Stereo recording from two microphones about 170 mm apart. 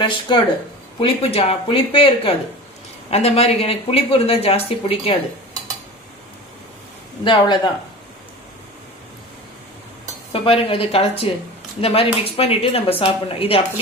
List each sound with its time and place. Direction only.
0.0 s speech: 25° left (ahead or behind)
7.3 s speech: 25° left (ahead or behind)
10.3 s speech: 35° left (ahead or behind)